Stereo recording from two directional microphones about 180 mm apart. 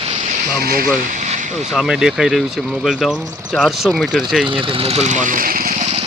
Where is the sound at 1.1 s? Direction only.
45° right (ahead or behind).